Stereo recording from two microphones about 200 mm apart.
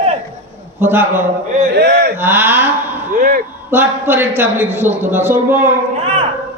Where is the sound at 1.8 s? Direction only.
55° right (ahead or behind).